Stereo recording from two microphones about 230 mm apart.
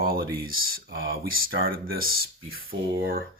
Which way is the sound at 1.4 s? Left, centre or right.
Right.